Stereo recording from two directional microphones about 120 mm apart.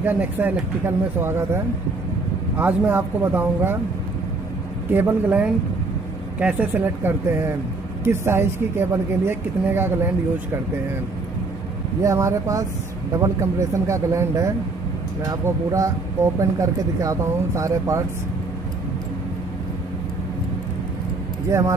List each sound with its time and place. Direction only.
0.0 s speech: 15° right (ahead or behind)
4.9 s speech: 15° right (ahead or behind)
12.0 s speech: 25° right (ahead or behind)
21.5 s speech: 25° right (ahead or behind)